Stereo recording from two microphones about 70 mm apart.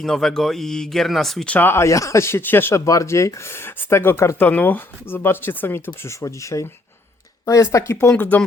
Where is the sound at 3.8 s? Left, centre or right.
Left.